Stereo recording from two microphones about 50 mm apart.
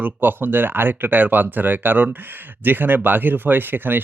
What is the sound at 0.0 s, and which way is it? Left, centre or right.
Speech, right.